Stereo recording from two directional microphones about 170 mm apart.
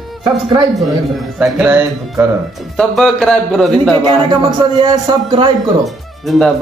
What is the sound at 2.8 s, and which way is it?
A man's voice, 5° left (ahead or behind).